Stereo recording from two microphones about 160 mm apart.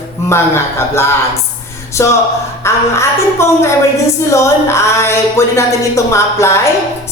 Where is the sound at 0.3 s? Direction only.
15° left (ahead or behind).